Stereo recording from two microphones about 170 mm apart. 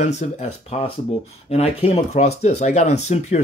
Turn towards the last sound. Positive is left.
turn(degrees=40)  # may be behind; listen again after turning